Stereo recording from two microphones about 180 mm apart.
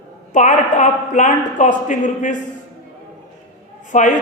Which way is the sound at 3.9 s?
45° left (ahead or behind).